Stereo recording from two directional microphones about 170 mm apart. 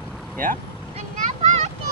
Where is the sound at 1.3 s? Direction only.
40° right (ahead or behind).